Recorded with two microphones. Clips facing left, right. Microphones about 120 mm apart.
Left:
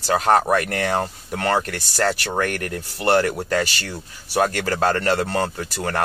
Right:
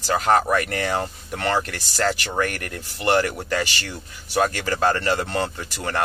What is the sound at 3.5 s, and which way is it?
Speech, 45° left (ahead or behind).